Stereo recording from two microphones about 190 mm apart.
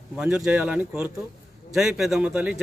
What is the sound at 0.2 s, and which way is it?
A man's voice, 5° right (ahead or behind).